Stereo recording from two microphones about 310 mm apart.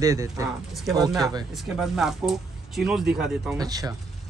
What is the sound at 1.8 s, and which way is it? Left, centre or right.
Speech, centre.